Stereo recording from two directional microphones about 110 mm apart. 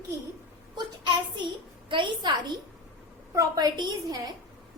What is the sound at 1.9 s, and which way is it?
Speech, 50° right (ahead or behind).